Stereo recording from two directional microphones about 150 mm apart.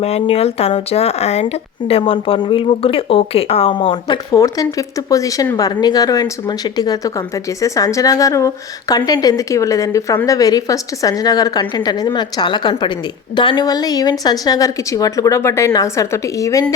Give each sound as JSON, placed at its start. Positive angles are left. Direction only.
{"t": 0.0, "sound": "a woman's voice", "side_deg": 40}